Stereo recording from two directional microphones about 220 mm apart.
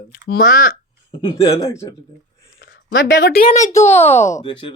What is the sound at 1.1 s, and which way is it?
Speech, 20° left (ahead or behind).